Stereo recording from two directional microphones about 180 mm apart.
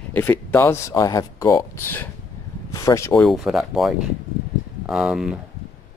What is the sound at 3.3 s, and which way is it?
Speech, centre (ahead or behind).